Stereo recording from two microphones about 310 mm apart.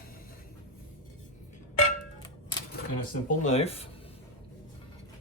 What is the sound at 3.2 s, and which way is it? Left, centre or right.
Speech, left.